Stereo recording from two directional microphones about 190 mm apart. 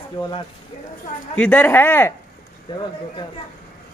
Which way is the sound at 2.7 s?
20° left (ahead or behind).